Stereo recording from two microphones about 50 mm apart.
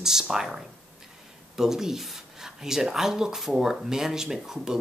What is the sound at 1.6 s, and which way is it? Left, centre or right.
Speech, centre.